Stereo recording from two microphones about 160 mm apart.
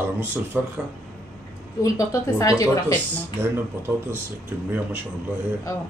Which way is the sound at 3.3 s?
15° right (ahead or behind).